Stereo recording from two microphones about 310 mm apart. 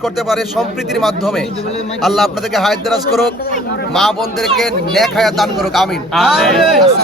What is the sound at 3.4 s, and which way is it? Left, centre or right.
Speech, left.